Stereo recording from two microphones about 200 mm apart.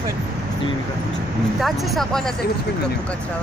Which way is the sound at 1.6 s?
Centre (ahead or behind).